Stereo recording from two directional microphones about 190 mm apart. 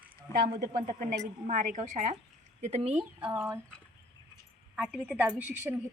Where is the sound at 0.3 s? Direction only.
15° left (ahead or behind).